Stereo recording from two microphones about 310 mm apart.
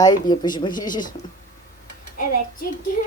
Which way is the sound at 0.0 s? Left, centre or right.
Centre.